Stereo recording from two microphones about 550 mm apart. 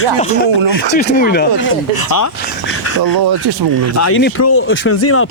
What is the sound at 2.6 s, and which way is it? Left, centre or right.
Bird, left.